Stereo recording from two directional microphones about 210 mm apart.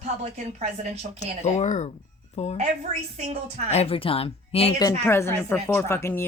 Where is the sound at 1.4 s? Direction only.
35° left (ahead or behind).